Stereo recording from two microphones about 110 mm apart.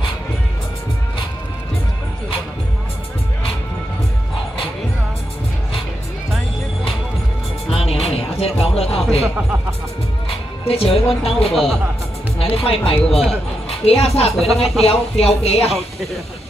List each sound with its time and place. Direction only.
7.7 s music: 65° left (ahead or behind)
10.7 s speech: 60° left (ahead or behind)
11.5 s speech: 5° left (ahead or behind)
12.4 s speech: 60° left (ahead or behind)